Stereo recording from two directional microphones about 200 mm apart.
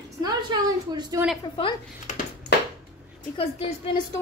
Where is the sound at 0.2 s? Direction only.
20° right (ahead or behind).